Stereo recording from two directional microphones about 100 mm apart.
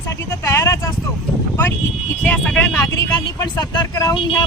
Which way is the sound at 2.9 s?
35° left (ahead or behind).